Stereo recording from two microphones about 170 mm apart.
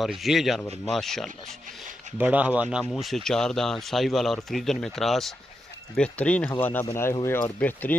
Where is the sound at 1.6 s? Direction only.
50° right (ahead or behind).